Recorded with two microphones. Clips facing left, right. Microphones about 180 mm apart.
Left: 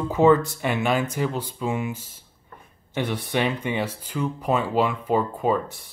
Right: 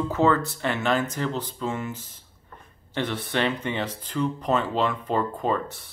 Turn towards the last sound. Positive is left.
turn(degrees=10)  # may be behind; listen again after turning